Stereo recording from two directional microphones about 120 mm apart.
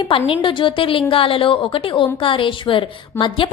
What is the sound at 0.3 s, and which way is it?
A woman's voice, 45° left (ahead or behind).